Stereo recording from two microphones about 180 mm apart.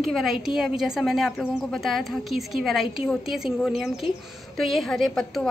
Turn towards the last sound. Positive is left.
turn(degrees=0)  # may be behind; listen again after turning